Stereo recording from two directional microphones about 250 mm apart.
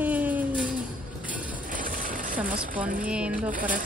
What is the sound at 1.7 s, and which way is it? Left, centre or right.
Sewing machine, right.